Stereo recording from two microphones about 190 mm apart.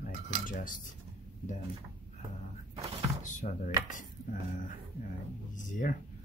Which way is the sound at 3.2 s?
40° left (ahead or behind).